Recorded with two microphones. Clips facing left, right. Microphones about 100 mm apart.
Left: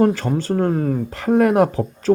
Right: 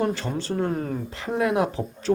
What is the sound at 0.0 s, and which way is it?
Speech, 45° left (ahead or behind).